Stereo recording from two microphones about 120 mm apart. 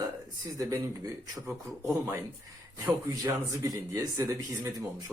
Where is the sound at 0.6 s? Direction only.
30° right (ahead or behind).